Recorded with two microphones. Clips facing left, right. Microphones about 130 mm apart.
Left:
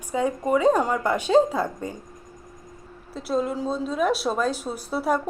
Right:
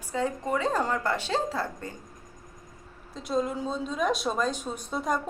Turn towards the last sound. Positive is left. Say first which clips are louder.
# left 5 dB
turn(degrees=5)  # may be behind; listen again after turning